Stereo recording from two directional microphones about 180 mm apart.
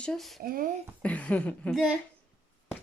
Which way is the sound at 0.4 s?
55° right (ahead or behind).